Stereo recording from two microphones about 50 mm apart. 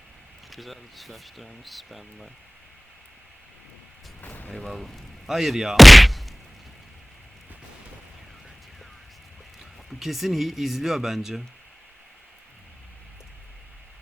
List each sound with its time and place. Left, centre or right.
0.5 s speech: centre
4.2 s vehicle: left
4.7 s speech: centre
9.9 s speech: centre